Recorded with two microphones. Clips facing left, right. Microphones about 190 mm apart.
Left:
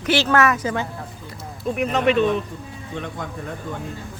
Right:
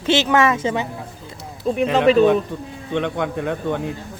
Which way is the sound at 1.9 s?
35° right (ahead or behind).